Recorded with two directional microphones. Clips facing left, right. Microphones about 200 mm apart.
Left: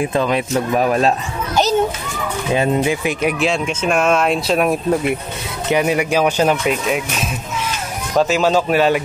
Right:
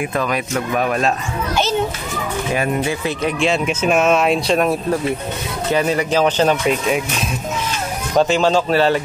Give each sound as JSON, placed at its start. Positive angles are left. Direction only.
{"t": 0.0, "sound": "a child's voice", "side_deg": 25}
{"t": 2.5, "sound": "speech", "side_deg": 20}
{"t": 3.3, "sound": "speech", "side_deg": 0}
{"t": 5.7, "sound": "speech", "side_deg": 15}
{"t": 8.2, "sound": "speech", "side_deg": 5}